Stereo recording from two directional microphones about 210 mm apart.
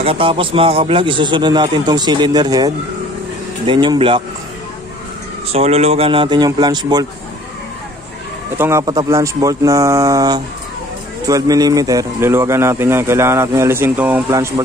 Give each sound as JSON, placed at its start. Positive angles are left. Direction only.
{"t": 0.0, "sound": "a man's voice", "side_deg": -25}
{"t": 5.5, "sound": "a man's voice", "side_deg": -30}
{"t": 8.5, "sound": "speech", "side_deg": -10}